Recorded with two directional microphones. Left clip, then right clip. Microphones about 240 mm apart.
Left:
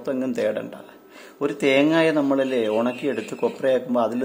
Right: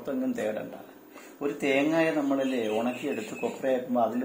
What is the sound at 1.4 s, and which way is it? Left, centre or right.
Speech, left.